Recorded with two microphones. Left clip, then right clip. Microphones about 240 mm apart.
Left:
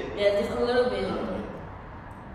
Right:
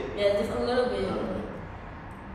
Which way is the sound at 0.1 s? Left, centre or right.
Centre.